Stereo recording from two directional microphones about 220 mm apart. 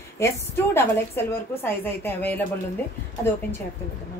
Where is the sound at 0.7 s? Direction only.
10° left (ahead or behind).